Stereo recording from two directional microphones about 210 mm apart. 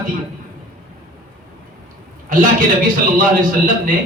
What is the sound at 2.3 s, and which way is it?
Speech, 40° right (ahead or behind).